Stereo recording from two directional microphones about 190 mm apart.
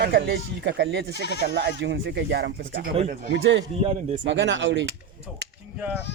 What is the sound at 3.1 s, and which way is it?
Speech, 50° right (ahead or behind).